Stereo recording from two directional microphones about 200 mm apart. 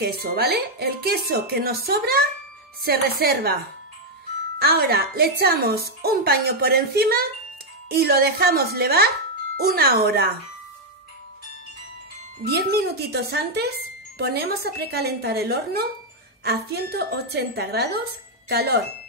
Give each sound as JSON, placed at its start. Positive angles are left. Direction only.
{"t": 0.0, "sound": "speech", "side_deg": -50}
{"t": 4.6, "sound": "speech", "side_deg": -50}
{"t": 12.4, "sound": "speech", "side_deg": -50}